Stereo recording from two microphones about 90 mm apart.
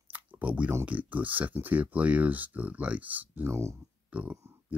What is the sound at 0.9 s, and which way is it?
Speech, 15° right (ahead or behind).